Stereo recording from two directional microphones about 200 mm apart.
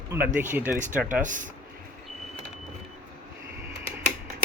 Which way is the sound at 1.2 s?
40° right (ahead or behind).